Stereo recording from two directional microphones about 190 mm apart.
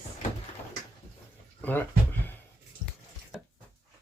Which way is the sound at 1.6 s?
10° left (ahead or behind).